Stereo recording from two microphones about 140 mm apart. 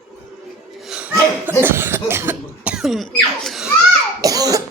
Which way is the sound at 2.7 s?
Centre (ahead or behind).